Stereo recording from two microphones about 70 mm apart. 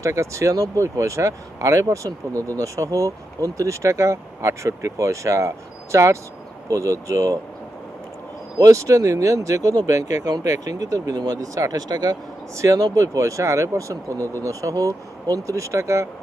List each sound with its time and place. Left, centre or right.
0.0 s speech: right
8.5 s speech: right
12.5 s speech: right